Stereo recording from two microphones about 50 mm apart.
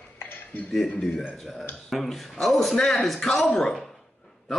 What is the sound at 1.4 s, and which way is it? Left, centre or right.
Speech, centre.